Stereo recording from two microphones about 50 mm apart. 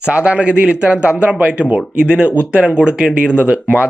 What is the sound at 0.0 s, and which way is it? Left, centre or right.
Speech, right.